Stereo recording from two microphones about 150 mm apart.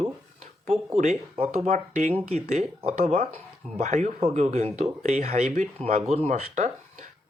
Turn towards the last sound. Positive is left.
turn(degrees=-55)  # may be behind; listen again after turning